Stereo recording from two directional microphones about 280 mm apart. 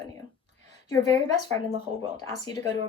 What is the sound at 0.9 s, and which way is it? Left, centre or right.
Speech, centre.